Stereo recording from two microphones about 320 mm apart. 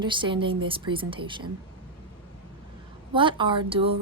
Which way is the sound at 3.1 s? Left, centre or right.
Centre.